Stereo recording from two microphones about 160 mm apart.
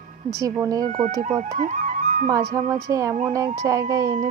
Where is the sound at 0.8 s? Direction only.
55° right (ahead or behind).